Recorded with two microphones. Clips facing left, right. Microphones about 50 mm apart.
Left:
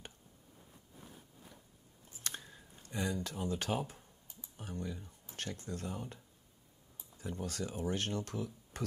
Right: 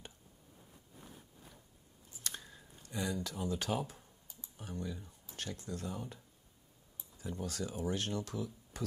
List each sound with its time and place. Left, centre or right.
2.1 s biting: left
2.4 s a sound: centre
2.8 s speech: left
4.3 s computer keyboard: left
5.2 s speech: left